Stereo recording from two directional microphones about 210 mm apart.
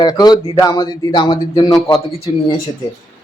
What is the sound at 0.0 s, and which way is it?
Speech, 20° left (ahead or behind).